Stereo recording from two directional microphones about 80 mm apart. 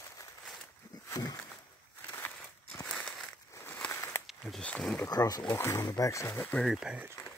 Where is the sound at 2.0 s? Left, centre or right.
Left.